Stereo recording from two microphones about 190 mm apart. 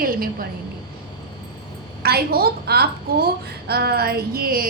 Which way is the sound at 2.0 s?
55° right (ahead or behind).